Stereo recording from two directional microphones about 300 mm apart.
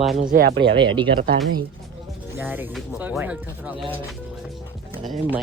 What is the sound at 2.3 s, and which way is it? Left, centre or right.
Speech, centre.